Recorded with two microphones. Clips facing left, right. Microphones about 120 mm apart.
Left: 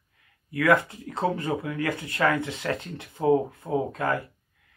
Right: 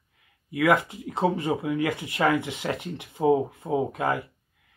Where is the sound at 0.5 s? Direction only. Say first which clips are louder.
Even; 20° right (ahead or behind).